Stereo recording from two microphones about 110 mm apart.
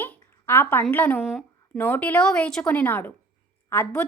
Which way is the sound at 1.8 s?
15° left (ahead or behind).